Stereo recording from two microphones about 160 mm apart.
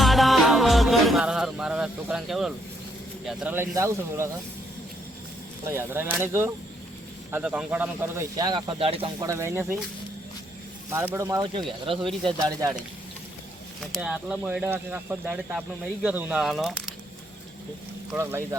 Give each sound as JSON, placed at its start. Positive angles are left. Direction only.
{"t": 0.0, "sound": "music", "side_deg": 0}
{"t": 3.2, "sound": "speech", "side_deg": -10}
{"t": 5.6, "sound": "speech", "side_deg": -15}
{"t": 9.2, "sound": "speech", "side_deg": -20}
{"t": 10.9, "sound": "speech", "side_deg": -15}
{"t": 11.9, "sound": "speech", "side_deg": -35}
{"t": 12.5, "sound": "speech", "side_deg": -25}
{"t": 13.9, "sound": "speech", "side_deg": -5}
{"t": 18.2, "sound": "speech", "side_deg": -15}